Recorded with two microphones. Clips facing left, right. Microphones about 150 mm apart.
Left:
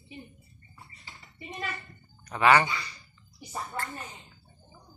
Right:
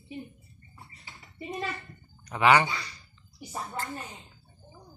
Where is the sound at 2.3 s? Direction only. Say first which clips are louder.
Even; 15° right (ahead or behind).